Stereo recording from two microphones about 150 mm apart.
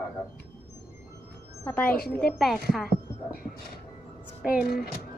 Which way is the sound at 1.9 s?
90° left.